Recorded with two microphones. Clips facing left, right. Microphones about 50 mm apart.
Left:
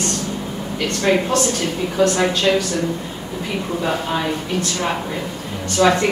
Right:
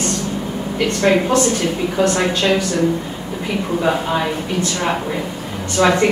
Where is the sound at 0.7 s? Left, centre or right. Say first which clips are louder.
Right 3 dB; right.